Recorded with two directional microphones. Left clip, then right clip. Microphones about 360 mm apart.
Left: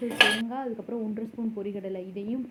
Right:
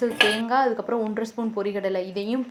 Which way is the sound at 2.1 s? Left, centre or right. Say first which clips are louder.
Right 7 dB; centre.